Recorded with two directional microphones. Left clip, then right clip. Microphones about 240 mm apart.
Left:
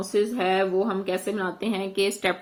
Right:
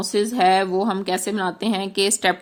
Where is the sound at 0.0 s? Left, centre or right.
Right.